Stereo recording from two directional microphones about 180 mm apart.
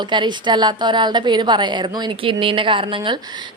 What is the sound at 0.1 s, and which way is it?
A woman's voice, 25° right (ahead or behind).